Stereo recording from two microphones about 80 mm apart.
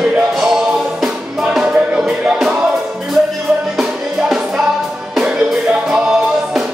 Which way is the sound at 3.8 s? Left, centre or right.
Centre.